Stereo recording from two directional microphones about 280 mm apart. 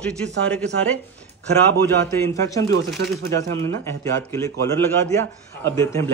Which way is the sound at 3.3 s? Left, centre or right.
Centre.